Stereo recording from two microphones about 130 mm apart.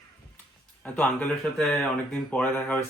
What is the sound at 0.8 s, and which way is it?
Speech, 10° left (ahead or behind).